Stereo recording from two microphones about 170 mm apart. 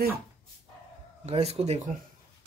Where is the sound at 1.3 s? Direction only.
35° right (ahead or behind).